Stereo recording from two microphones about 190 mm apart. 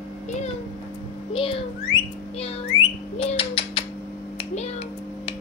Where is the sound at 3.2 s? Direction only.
30° left (ahead or behind).